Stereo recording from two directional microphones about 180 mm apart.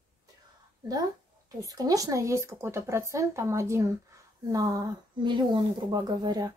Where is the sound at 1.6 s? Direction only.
20° right (ahead or behind).